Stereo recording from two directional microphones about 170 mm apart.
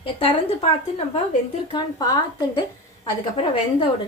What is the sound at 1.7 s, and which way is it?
Speech, 25° left (ahead or behind).